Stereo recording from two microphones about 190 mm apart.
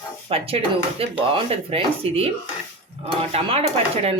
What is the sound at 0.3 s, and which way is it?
A woman's voice, 30° right (ahead or behind).